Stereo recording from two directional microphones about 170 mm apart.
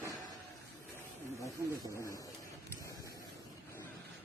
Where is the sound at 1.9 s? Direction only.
20° left (ahead or behind).